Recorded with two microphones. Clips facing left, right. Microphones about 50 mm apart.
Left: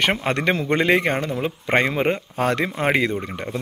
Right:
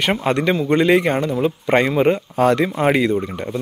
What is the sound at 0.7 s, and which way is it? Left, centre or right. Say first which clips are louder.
Speech: right 4 dB; left.